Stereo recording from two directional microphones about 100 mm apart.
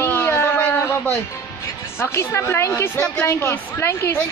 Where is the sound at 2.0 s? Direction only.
25° left (ahead or behind).